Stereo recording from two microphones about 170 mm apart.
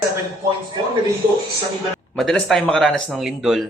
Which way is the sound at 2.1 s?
Centre (ahead or behind).